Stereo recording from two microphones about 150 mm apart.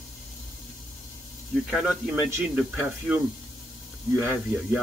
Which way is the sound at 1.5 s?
Centre (ahead or behind).